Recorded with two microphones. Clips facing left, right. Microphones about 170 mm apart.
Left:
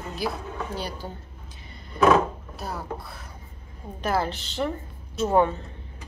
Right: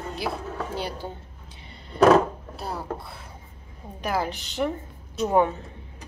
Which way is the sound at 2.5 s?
30° right (ahead or behind).